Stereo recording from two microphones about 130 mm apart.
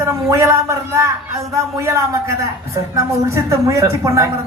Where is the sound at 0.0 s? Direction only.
25° right (ahead or behind).